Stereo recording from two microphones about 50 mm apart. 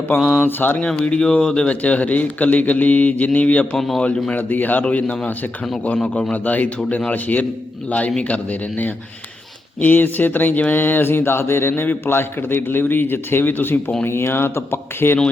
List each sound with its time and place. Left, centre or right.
0.1 s a man's voice: left
1.0 s speech: left
1.7 s a man's voice: left
3.8 s a man's voice: centre
4.0 s speech: left
4.4 s a man's voice: left
6.3 s a man's voice: left
14.0 s a man's voice: left